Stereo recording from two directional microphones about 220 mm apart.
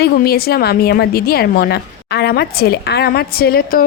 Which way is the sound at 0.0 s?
45° left (ahead or behind).